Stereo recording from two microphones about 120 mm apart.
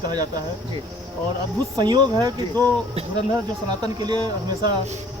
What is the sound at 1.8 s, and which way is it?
Speech, 35° right (ahead or behind).